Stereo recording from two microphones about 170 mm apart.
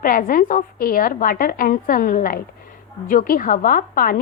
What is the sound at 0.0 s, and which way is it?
A woman's voice, 55° left (ahead or behind).